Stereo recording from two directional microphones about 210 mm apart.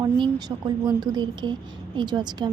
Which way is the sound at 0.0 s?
20° right (ahead or behind).